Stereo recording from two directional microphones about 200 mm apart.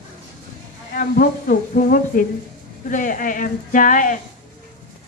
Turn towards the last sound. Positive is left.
turn(degrees=40)  # may be behind; listen again after turning